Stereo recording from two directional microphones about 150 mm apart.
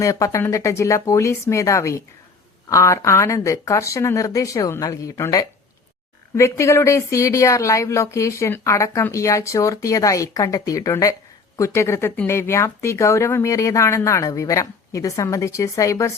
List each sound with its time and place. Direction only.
0.0 s speech: 20° left (ahead or behind)